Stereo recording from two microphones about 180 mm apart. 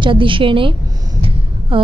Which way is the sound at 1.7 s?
30° right (ahead or behind).